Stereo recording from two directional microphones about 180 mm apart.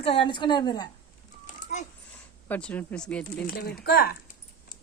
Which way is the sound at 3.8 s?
60° left (ahead or behind).